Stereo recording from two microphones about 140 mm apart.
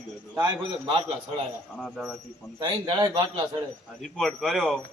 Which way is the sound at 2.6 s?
30° right (ahead or behind).